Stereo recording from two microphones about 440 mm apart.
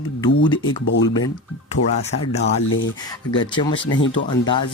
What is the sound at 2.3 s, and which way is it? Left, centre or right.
Speech, centre.